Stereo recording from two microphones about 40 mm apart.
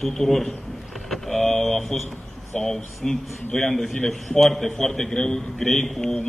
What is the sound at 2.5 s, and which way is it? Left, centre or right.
A man's voice, centre.